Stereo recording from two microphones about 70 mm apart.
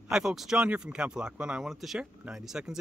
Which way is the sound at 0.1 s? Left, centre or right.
Centre.